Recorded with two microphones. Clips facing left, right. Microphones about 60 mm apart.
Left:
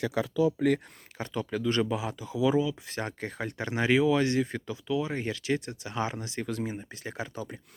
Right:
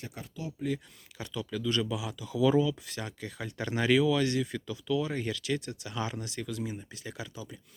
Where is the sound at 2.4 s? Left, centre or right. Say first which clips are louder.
Even; centre.